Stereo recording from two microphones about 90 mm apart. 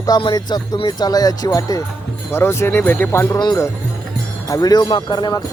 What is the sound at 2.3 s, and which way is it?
Speech, 25° left (ahead or behind).